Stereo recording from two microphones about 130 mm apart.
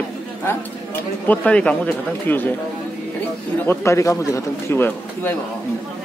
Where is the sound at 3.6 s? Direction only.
20° left (ahead or behind).